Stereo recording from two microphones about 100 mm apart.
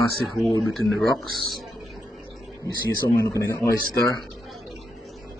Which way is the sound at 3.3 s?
30° left (ahead or behind).